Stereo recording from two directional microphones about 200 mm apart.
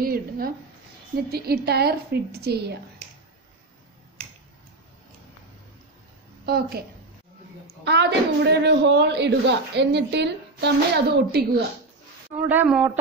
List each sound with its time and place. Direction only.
0.0 s a sound: 45° right (ahead or behind)
1.3 s a woman's voice: 55° right (ahead or behind)
6.4 s a woman's voice: 50° right (ahead or behind)
7.8 s a woman's voice: 60° right (ahead or behind)
12.4 s speech: 10° right (ahead or behind)